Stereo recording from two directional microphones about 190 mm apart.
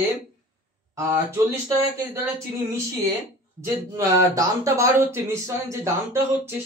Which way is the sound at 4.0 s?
15° right (ahead or behind).